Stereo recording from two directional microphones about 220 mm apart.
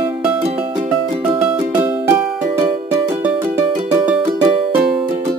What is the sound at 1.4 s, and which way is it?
Music, 10° right (ahead or behind).